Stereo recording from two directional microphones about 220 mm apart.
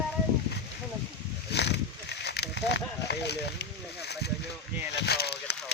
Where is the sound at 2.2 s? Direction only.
50° left (ahead or behind).